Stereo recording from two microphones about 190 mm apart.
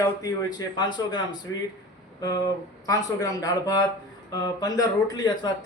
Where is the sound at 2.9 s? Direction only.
20° left (ahead or behind).